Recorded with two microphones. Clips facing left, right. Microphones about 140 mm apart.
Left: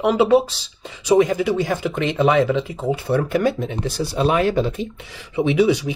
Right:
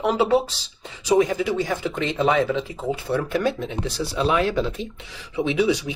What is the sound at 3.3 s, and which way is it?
Speech, 55° left (ahead or behind).